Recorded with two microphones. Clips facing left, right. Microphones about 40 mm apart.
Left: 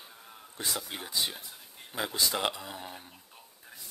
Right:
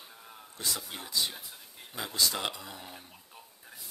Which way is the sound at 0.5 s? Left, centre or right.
Left.